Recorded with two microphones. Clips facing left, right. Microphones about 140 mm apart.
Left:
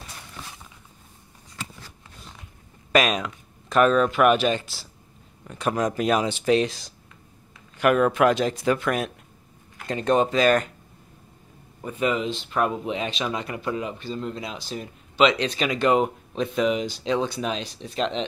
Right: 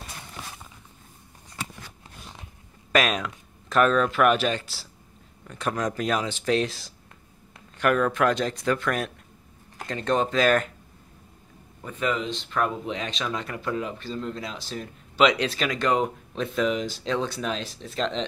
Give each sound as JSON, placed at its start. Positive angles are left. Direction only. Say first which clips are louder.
{"t": 2.9, "sound": "speech", "louder": "left 2 dB", "side_deg": 0}
{"t": 7.7, "sound": "speech", "louder": "left 3 dB", "side_deg": 10}
{"t": 11.8, "sound": "speech", "louder": "left 3 dB", "side_deg": 15}
{"t": 15.1, "sound": "speech", "louder": "left 1 dB", "side_deg": -5}